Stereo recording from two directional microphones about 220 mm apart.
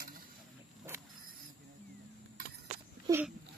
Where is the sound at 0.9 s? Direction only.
10° right (ahead or behind).